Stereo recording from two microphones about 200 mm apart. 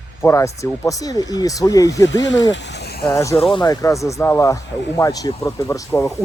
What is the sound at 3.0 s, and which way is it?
Speech, 15° left (ahead or behind).